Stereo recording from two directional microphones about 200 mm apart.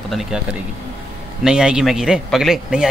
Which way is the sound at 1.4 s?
5° right (ahead or behind).